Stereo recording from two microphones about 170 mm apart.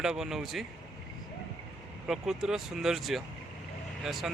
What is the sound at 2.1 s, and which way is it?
Speech, centre (ahead or behind).